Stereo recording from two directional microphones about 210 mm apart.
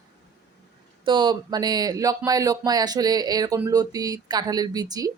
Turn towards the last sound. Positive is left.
turn(degrees=-15)  # may be behind; listen again after turning